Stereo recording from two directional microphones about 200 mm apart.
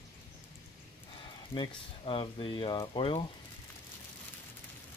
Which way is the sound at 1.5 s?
25° left (ahead or behind).